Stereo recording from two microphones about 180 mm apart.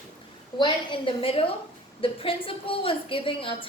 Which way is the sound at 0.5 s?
25° left (ahead or behind).